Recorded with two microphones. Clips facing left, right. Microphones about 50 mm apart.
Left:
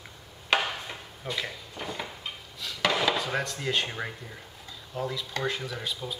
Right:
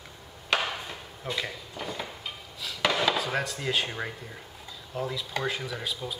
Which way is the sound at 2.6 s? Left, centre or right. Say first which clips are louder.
Even; centre.